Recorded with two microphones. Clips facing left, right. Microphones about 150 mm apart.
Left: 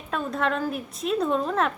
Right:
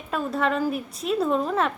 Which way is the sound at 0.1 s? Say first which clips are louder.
Right 2 dB; 5° right (ahead or behind).